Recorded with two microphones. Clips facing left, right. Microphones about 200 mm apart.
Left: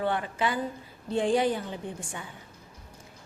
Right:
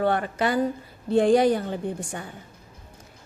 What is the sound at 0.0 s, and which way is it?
Speech, 45° right (ahead or behind).